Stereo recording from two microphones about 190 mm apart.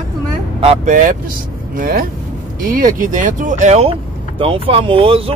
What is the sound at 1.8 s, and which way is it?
Speech, 50° right (ahead or behind).